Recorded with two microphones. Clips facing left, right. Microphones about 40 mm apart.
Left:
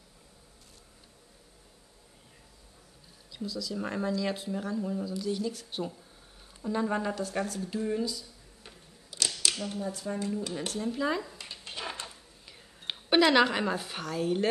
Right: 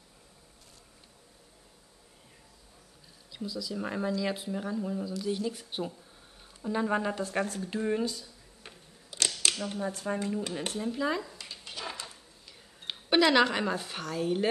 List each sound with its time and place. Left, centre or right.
3.3 s speech: centre
7.2 s speech: right
9.2 s camera: right
9.6 s speech: right
10.8 s speech: centre
11.3 s a sound: centre
12.9 s speech: centre